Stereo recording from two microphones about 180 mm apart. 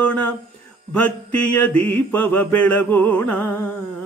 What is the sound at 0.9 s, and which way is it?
Mantra, 10° left (ahead or behind).